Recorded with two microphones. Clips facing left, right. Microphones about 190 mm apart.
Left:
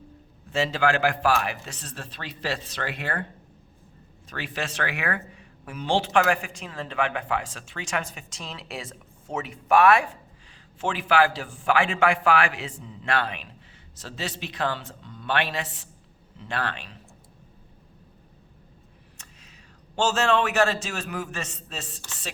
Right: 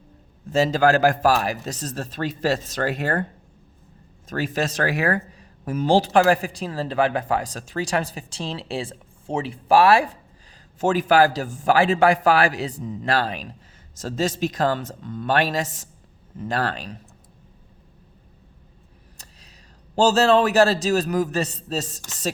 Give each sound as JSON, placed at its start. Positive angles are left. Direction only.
{"t": 0.5, "sound": "speech", "side_deg": -40}
{"t": 4.3, "sound": "speech", "side_deg": -40}
{"t": 19.1, "sound": "a sound", "side_deg": -35}
{"t": 20.0, "sound": "speech", "side_deg": -35}